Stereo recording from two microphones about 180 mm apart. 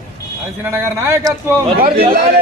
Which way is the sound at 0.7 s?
15° right (ahead or behind).